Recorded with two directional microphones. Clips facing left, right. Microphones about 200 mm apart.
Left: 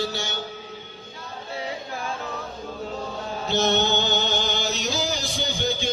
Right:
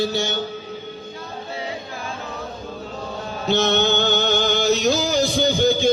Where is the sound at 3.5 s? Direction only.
65° right (ahead or behind); by 5.5 s 50° right (ahead or behind).